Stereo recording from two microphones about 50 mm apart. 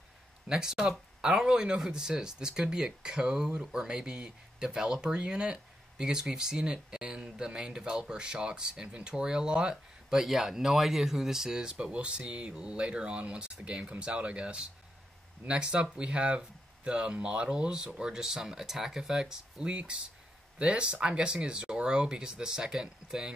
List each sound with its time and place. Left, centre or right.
0.5 s speech: centre
11.9 s speech: right